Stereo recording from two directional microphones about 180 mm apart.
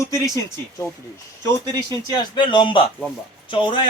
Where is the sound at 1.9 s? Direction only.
20° left (ahead or behind).